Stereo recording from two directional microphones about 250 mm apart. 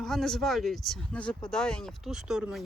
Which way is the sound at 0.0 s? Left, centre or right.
Centre.